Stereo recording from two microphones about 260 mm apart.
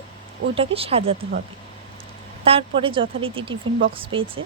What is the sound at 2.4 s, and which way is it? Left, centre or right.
Speech, right.